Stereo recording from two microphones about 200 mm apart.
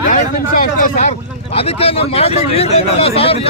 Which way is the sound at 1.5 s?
30° left (ahead or behind).